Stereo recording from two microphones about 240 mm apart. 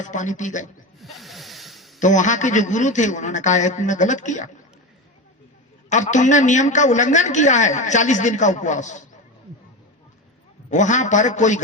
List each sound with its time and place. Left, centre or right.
0.0 s a woman's voice: left
0.9 s snake: centre
2.0 s a woman's voice: left
5.9 s a woman's voice: left
10.7 s a woman's voice: left